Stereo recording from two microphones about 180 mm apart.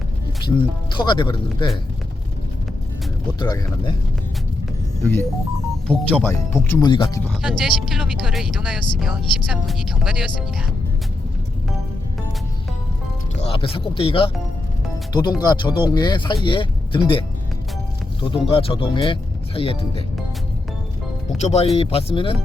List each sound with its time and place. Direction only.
0.4 s speech: 25° left (ahead or behind)
3.3 s speech: 25° left (ahead or behind)
5.9 s speech: 5° left (ahead or behind)
6.8 s speech: 25° left (ahead or behind)
7.4 s speech: centre (ahead or behind)
13.4 s speech: 30° left (ahead or behind)
18.3 s speech: 30° left (ahead or behind)
21.4 s speech: 35° left (ahead or behind)